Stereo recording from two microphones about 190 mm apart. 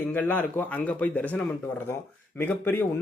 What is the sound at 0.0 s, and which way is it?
A man's voice, 10° left (ahead or behind).